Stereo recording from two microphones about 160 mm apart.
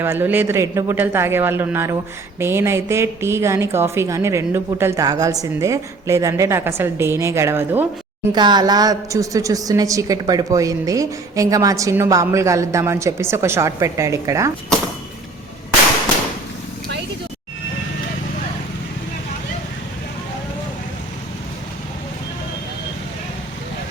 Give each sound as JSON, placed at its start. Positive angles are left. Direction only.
{"t": 0.0, "sound": "a woman's voice", "side_deg": -15}
{"t": 8.4, "sound": "a woman's voice", "side_deg": -25}
{"t": 14.7, "sound": "speech", "side_deg": 5}